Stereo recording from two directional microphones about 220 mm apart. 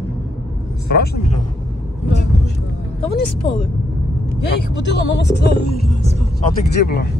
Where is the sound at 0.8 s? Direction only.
45° left (ahead or behind).